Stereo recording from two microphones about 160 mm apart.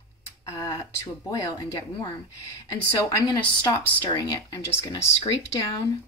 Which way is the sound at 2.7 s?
20° left (ahead or behind).